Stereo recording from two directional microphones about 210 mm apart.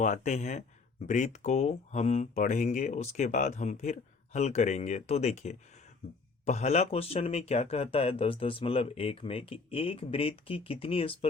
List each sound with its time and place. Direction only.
0.0 s speech: 35° left (ahead or behind)